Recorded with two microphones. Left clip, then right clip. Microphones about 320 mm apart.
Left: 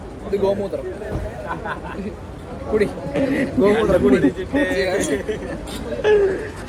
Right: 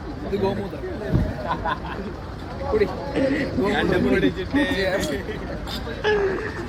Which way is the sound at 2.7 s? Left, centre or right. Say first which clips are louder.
Left 2 dB; left.